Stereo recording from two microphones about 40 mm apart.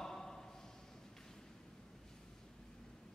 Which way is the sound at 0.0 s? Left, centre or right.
Centre.